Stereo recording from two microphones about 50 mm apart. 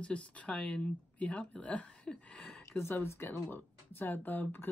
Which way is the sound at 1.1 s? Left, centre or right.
Left.